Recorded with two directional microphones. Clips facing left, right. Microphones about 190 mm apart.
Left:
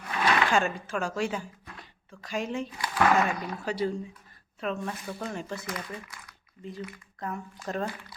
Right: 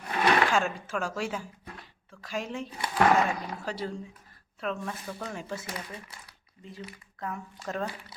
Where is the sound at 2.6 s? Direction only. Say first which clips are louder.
Even; 30° right (ahead or behind).